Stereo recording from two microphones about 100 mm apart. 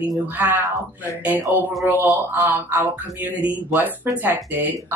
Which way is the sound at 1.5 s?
20° right (ahead or behind).